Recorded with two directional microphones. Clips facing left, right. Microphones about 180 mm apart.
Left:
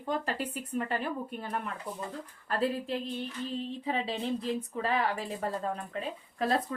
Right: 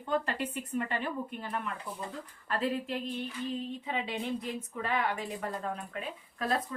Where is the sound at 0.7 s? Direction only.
40° left (ahead or behind).